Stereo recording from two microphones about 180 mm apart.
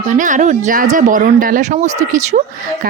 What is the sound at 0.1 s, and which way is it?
A woman's voice, 45° right (ahead or behind).